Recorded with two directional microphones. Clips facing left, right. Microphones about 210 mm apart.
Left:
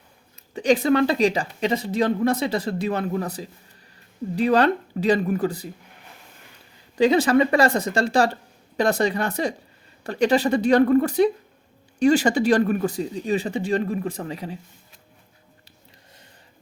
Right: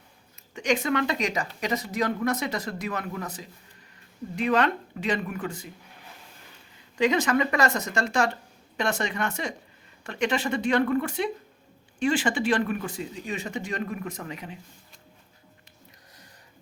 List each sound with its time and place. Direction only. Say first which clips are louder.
0.5 s speech: left 7 dB; 35° left (ahead or behind)
6.9 s speech: left 6 dB; 35° left (ahead or behind)